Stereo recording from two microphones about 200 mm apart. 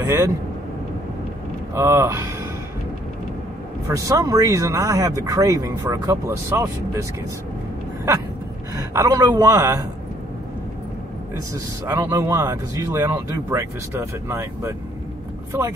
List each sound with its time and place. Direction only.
0.0 s speech: 15° right (ahead or behind)
1.7 s speech: 15° right (ahead or behind)
3.8 s speech: 15° right (ahead or behind)
8.7 s speech: 15° right (ahead or behind)
11.8 s speech: 15° right (ahead or behind)